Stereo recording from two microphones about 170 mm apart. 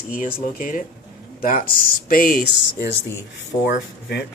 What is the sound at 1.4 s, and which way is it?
Speech, 50° left (ahead or behind).